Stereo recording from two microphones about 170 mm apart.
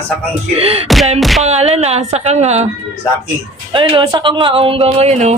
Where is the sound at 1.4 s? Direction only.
40° right (ahead or behind).